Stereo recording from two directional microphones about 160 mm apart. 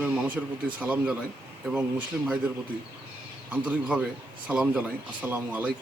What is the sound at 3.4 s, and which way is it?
A man's voice, 10° right (ahead or behind).